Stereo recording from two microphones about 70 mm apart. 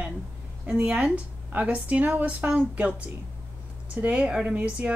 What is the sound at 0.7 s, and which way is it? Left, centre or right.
A woman's voice, centre.